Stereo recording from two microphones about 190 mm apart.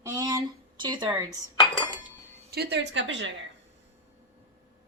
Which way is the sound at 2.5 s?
60° right (ahead or behind).